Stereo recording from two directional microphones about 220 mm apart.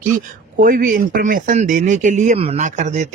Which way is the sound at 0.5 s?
40° right (ahead or behind).